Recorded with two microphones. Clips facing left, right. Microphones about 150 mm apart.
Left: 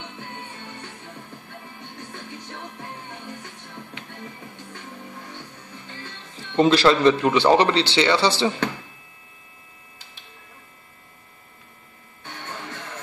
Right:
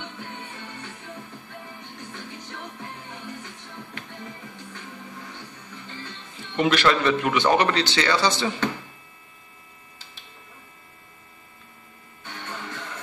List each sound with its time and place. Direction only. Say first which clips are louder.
6.5 s speech: left 4 dB; 35° left (ahead or behind)